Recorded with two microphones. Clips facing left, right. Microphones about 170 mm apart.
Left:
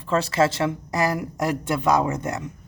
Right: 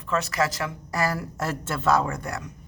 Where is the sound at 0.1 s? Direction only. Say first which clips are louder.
Left 5 dB; 30° left (ahead or behind).